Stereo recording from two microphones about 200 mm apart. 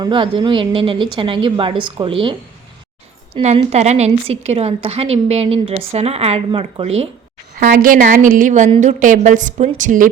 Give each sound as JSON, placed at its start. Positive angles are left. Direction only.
{"t": 0.0, "sound": "a woman's voice", "side_deg": -25}
{"t": 3.3, "sound": "a woman's voice", "side_deg": -30}
{"t": 7.6, "sound": "a woman's voice", "side_deg": -45}